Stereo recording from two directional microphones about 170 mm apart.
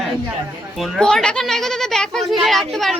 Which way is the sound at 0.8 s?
Centre (ahead or behind).